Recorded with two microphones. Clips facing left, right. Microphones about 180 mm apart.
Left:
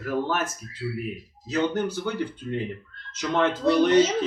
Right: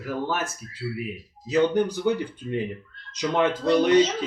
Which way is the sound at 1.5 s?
15° right (ahead or behind).